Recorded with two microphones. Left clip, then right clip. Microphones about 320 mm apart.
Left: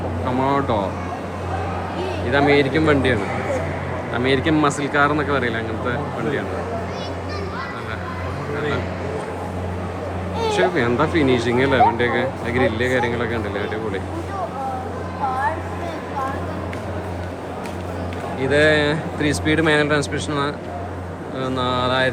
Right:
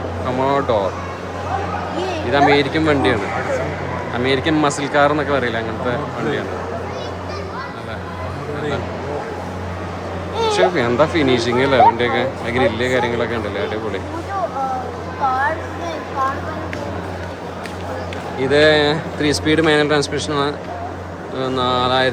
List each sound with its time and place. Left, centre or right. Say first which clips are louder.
0.3 s speech: right 3 dB; centre
2.3 s speech: right 2 dB; centre
10.5 s speech: right 2 dB; centre
18.3 s speech: right 3 dB; centre